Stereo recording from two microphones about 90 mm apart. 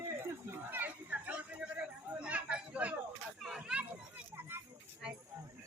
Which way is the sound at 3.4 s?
5° right (ahead or behind).